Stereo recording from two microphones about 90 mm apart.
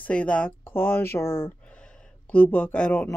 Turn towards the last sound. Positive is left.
turn(degrees=15)  # may be behind; listen again after turning